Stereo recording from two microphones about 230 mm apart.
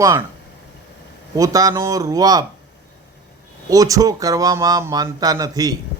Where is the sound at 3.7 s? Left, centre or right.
Centre.